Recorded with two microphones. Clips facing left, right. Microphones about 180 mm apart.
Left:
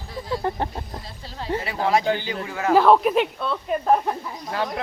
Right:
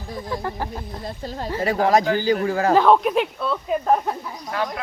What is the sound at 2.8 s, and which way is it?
Speech, centre (ahead or behind).